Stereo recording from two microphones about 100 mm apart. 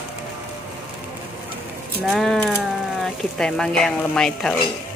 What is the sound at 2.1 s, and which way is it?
Speech, centre (ahead or behind).